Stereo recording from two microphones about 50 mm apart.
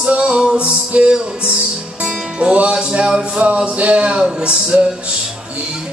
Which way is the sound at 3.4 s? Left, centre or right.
Right.